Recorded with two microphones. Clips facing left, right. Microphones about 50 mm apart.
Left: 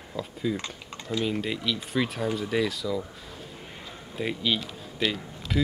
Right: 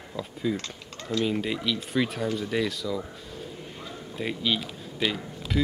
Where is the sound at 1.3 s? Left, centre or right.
Centre.